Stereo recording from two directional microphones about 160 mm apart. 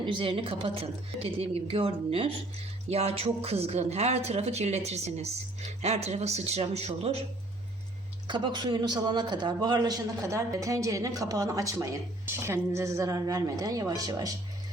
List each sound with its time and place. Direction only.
0.0 s a woman's voice: 30° right (ahead or behind)
8.3 s a man's voice: 30° right (ahead or behind)